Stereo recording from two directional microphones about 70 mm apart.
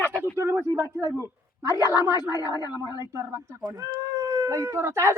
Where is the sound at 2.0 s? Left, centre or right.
Left.